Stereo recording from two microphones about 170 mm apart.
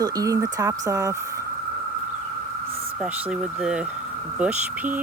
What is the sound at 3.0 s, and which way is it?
Speech, 5° right (ahead or behind).